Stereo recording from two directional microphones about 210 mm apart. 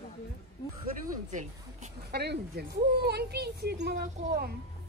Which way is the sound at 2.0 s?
50° right (ahead or behind).